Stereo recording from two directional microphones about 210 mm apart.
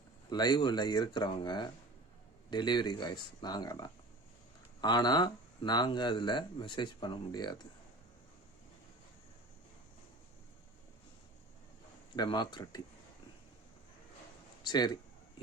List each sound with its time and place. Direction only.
0.3 s speech: 20° left (ahead or behind)
12.1 s speech: 20° left (ahead or behind)
14.6 s speech: 20° left (ahead or behind)